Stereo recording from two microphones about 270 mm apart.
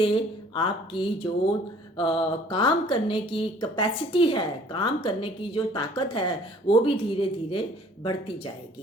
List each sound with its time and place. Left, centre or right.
0.0 s speech: centre